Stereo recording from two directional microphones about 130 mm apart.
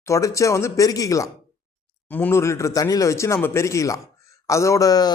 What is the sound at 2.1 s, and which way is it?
Speech, 15° left (ahead or behind).